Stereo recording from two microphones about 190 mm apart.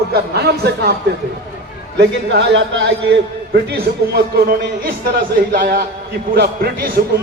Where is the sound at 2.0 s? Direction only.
65° right (ahead or behind).